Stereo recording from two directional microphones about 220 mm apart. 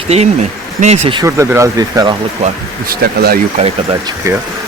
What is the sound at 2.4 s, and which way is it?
Speech, 30° right (ahead or behind).